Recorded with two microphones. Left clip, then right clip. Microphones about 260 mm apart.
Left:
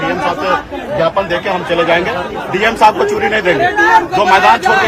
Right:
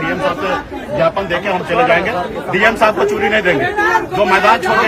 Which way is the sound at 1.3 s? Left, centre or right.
Centre.